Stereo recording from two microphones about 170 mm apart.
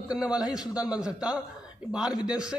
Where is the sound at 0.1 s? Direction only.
5° right (ahead or behind).